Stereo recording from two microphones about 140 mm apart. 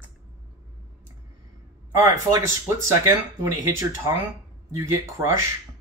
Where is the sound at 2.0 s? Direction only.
20° right (ahead or behind).